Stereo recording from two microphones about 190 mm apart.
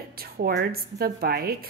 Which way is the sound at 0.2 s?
55° right (ahead or behind).